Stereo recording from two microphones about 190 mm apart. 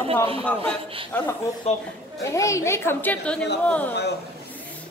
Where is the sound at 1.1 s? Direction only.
10° left (ahead or behind).